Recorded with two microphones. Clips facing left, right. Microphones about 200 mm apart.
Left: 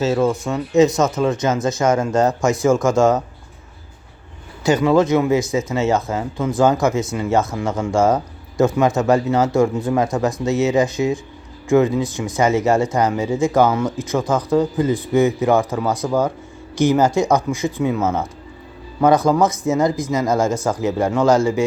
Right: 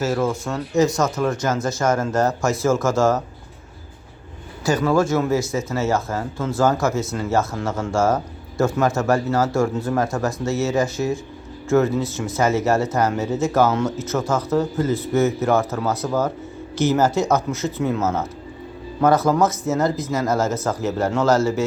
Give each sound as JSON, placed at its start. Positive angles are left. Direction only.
{"t": 0.0, "sound": "speech", "side_deg": 15}
{"t": 4.6, "sound": "speech", "side_deg": 20}